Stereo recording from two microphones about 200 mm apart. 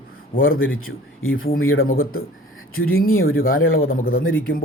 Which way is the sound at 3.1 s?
90° left.